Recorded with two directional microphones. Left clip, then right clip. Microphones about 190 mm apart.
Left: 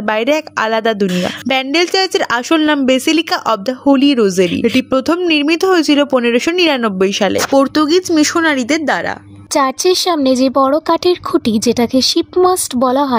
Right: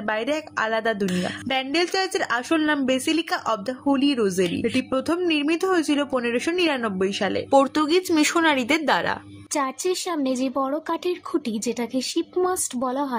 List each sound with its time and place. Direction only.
0.0 s a woman's voice: 55° left (ahead or behind)
7.5 s speech: 30° left (ahead or behind)
9.5 s a woman's voice: 50° left (ahead or behind)